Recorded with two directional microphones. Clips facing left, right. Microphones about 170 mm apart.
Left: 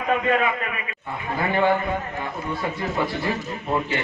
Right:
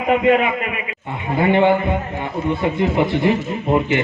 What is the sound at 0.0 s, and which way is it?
A man's voice, 15° right (ahead or behind).